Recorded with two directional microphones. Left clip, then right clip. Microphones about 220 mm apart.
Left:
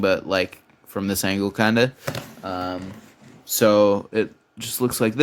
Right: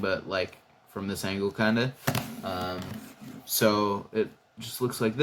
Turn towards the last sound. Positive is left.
turn(degrees=55)  # may be behind; listen again after turning